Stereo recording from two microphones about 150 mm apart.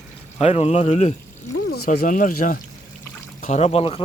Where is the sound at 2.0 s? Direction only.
65° left (ahead or behind).